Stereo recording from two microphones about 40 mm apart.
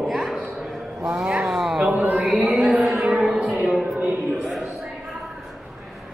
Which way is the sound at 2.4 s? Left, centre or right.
Right.